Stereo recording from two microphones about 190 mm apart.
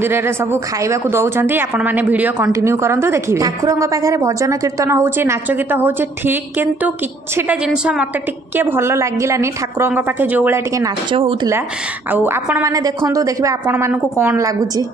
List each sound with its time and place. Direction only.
0.0 s a woman's voice: 10° right (ahead or behind)